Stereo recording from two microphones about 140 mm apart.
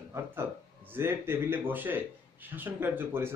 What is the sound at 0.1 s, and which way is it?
A man's voice, 15° right (ahead or behind).